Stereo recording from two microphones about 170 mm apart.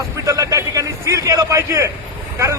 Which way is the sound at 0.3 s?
20° right (ahead or behind).